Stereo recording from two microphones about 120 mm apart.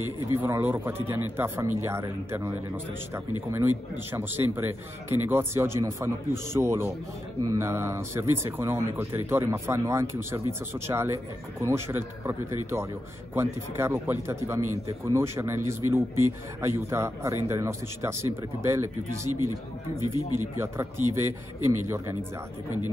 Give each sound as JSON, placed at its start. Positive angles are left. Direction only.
{"t": 0.4, "sound": "speech", "side_deg": -15}
{"t": 4.1, "sound": "speech", "side_deg": -20}
{"t": 20.0, "sound": "speech", "side_deg": 30}
{"t": 20.5, "sound": "speech", "side_deg": -20}